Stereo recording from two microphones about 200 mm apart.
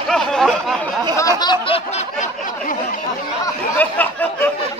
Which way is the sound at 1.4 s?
25° left (ahead or behind).